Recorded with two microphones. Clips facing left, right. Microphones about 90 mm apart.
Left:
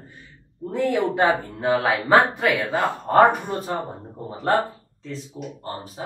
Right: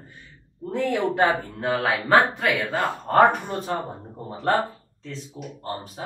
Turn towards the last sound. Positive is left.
turn(degrees=0)  # may be behind; listen again after turning